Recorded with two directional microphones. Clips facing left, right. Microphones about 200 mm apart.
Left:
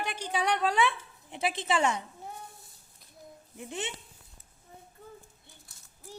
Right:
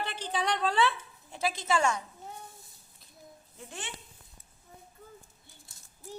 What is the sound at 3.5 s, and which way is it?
Speech, 20° left (ahead or behind).